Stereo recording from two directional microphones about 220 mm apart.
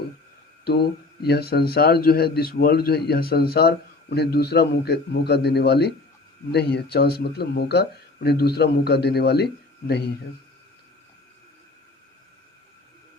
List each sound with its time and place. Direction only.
1.2 s a man's voice: 45° left (ahead or behind)